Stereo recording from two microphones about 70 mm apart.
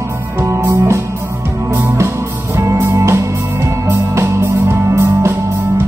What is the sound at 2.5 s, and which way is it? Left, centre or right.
Music, right.